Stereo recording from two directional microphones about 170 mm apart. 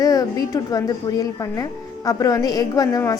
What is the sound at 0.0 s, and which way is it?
A woman's voice, 20° left (ahead or behind).